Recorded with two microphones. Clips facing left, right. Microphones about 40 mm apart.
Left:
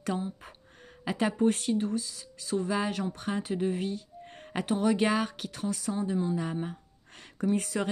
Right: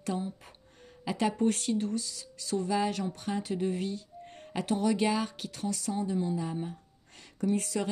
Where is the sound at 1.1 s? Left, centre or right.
Left.